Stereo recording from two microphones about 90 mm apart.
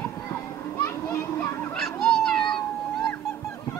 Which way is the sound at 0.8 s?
30° left (ahead or behind).